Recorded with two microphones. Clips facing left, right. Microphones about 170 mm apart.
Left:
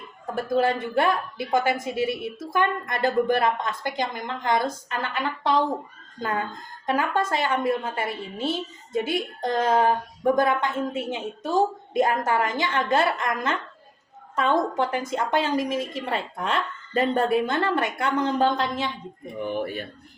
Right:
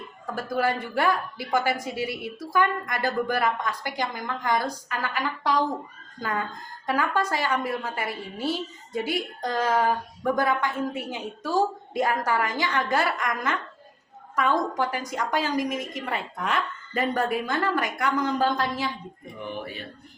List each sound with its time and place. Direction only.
0.3 s a woman's voice: 25° left (ahead or behind)